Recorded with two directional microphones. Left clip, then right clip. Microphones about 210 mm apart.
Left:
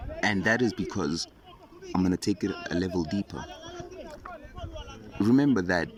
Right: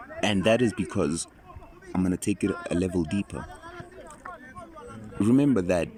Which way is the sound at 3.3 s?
30° left (ahead or behind).